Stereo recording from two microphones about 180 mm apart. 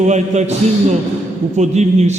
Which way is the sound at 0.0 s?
40° right (ahead or behind).